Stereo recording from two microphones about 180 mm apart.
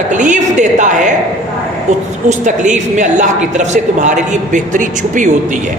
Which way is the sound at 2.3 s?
45° right (ahead or behind).